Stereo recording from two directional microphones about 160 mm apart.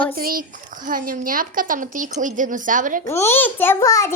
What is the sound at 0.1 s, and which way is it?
Speech, 65° right (ahead or behind).